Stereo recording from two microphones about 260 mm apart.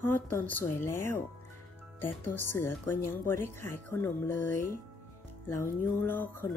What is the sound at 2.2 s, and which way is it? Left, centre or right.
Speech, centre.